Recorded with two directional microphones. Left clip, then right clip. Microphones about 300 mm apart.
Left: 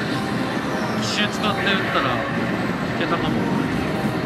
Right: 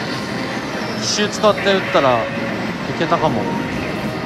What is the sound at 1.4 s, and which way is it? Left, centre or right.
Speech, centre.